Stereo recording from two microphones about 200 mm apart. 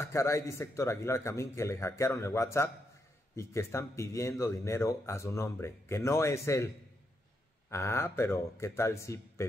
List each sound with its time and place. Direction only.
0.0 s speech: 15° left (ahead or behind)
7.7 s speech: 10° left (ahead or behind)